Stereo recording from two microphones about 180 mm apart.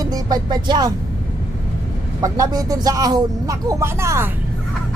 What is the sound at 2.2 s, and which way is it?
Speech, 20° right (ahead or behind).